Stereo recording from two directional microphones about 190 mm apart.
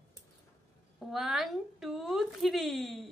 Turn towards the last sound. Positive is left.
turn(degrees=0)  # may be behind; listen again after turning